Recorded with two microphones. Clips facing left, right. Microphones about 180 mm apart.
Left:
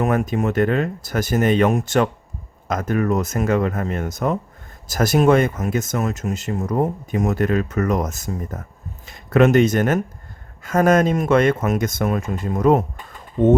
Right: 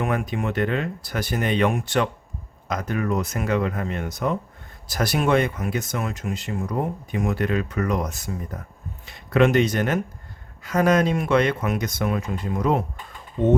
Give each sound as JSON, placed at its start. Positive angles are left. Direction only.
{"t": 0.0, "sound": "speech", "side_deg": 45}